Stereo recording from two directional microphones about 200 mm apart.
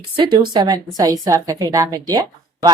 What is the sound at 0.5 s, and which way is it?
Speech, 20° right (ahead or behind).